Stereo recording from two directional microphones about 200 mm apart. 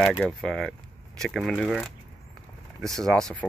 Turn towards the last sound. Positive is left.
turn(degrees=5)  # may be behind; listen again after turning